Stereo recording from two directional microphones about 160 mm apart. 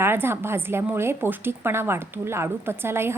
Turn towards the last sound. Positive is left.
turn(degrees=-15)  # may be behind; listen again after turning